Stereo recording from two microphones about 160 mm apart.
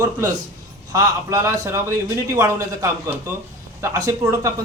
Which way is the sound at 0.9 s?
20° right (ahead or behind).